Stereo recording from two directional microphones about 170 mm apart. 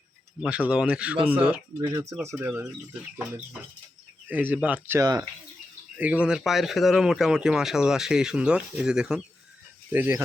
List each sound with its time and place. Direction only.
0.4 s speech: 5° right (ahead or behind)
4.3 s speech: 10° right (ahead or behind)